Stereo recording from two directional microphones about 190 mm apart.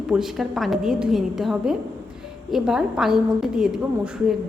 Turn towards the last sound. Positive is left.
turn(degrees=-5)  # may be behind; listen again after turning